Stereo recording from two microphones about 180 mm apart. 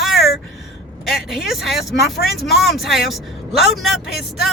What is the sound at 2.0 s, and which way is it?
Speech, 65° left (ahead or behind).